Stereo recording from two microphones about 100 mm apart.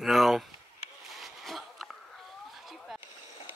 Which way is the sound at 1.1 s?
Centre (ahead or behind).